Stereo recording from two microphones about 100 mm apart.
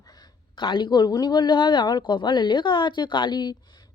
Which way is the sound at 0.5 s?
55° left (ahead or behind).